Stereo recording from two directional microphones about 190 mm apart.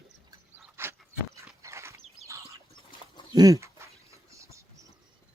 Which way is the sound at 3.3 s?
20° right (ahead or behind).